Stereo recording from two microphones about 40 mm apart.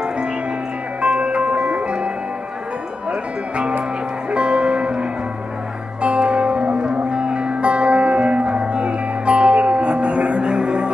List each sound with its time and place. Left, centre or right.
1.0 s music: right
3.1 s music: right
6.0 s music: right